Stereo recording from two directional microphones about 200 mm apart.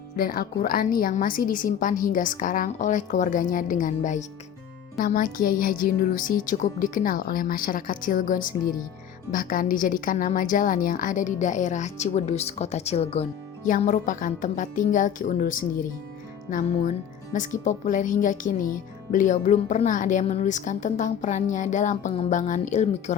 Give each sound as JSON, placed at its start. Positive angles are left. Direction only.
{"t": 0.2, "sound": "a woman's voice", "side_deg": 50}